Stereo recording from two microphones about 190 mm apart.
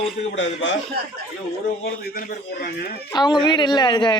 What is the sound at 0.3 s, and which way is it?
Speech, 70° left (ahead or behind).